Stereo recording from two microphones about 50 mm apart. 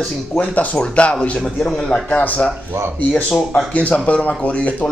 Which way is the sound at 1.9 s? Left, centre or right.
Left.